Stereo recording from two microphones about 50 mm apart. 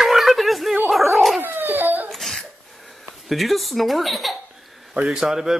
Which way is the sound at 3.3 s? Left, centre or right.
Centre.